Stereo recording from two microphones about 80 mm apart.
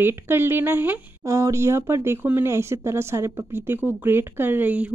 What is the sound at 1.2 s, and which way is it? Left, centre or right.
Speech, right.